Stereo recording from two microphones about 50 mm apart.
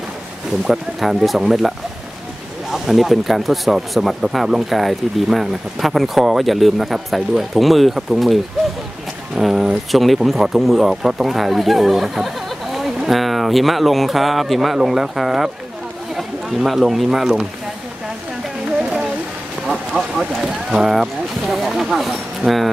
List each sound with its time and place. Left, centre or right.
0.7 s speech: centre
2.7 s speech: centre
9.4 s speech: centre
18.8 s a sound: right
19.6 s vehicle: centre
20.4 s speech: centre